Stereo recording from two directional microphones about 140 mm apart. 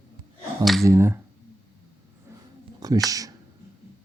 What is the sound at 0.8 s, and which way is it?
Speech, 20° right (ahead or behind).